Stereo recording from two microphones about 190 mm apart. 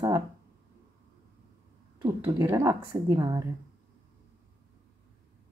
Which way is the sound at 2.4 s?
15° right (ahead or behind).